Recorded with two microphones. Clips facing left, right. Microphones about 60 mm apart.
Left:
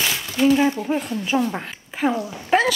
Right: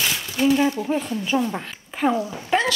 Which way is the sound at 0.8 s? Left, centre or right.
Centre.